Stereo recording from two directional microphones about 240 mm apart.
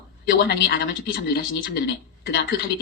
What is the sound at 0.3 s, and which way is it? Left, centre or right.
Speech, left.